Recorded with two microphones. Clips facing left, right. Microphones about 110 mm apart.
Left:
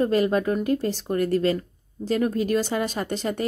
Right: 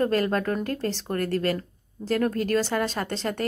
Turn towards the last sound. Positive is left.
turn(degrees=15)  # may be behind; listen again after turning